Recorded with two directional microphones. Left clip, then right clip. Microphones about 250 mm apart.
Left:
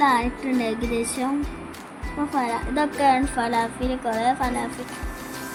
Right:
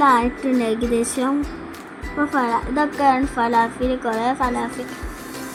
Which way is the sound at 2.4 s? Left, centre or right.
Centre.